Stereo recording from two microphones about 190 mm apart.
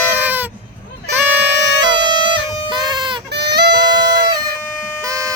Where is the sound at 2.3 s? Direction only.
25° right (ahead or behind).